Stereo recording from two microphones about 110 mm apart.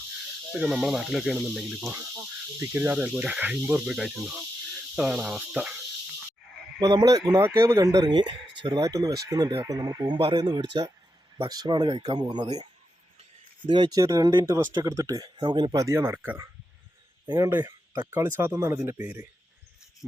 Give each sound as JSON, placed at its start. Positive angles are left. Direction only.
{"t": 0.6, "sound": "speech", "side_deg": -5}
{"t": 2.6, "sound": "cricket", "side_deg": -15}
{"t": 6.8, "sound": "speech", "side_deg": -35}
{"t": 13.7, "sound": "speech", "side_deg": -45}
{"t": 14.0, "sound": "speech", "side_deg": -30}
{"t": 15.8, "sound": "speech", "side_deg": -25}
{"t": 17.7, "sound": "a sound", "side_deg": -35}
{"t": 18.1, "sound": "speech", "side_deg": -20}